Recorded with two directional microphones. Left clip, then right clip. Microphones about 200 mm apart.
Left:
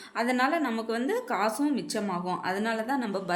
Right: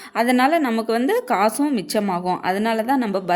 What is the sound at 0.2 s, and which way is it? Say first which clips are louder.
Speech: right 9 dB; 45° right (ahead or behind).